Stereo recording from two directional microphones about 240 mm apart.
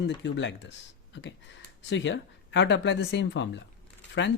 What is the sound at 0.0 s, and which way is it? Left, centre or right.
Speech, left.